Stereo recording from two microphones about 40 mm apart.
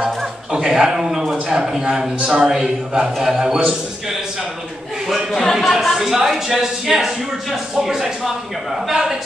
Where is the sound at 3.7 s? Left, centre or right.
Centre.